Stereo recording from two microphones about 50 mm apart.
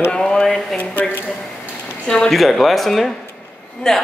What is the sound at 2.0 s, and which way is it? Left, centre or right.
Speech, centre.